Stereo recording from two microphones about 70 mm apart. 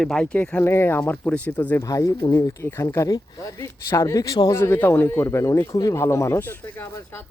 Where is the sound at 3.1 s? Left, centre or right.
Left.